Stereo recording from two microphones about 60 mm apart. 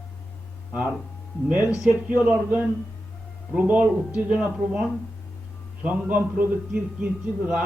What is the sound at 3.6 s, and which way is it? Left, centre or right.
A man's voice, right.